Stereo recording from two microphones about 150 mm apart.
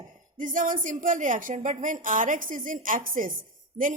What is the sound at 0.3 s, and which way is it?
A woman's voice, 60° right (ahead or behind).